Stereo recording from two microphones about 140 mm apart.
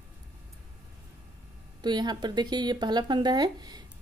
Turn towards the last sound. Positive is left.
turn(degrees=-30)  # may be behind; listen again after turning